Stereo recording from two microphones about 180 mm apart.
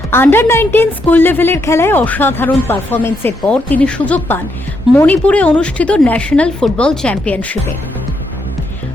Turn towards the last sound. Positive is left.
turn(degrees=10)  # may be behind; listen again after turning